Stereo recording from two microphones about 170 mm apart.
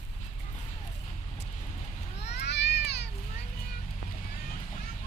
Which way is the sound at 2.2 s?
80° left.